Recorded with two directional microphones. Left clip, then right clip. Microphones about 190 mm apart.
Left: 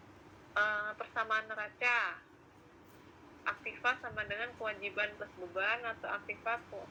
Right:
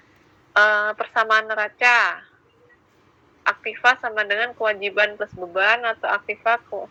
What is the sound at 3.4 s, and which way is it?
A woman's voice, 50° right (ahead or behind).